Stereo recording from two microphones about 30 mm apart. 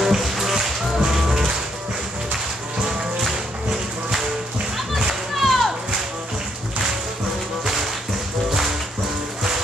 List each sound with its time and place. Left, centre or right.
0.0 s music: centre
4.7 s music: centre
5.3 s a sound: centre